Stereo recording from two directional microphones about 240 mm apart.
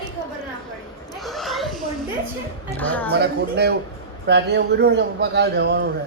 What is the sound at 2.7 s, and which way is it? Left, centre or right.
Speech, centre.